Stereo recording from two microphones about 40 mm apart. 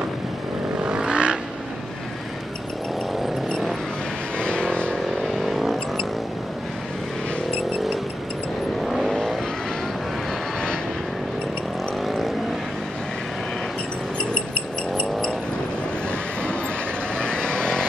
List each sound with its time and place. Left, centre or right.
0.7 s vehicle: right
4.4 s vehicle: left
5.4 s vehicle: centre
8.8 s vehicle: centre
17.2 s vehicle: left